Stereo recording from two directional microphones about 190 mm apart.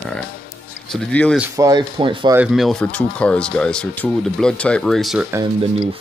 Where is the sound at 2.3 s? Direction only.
Centre (ahead or behind).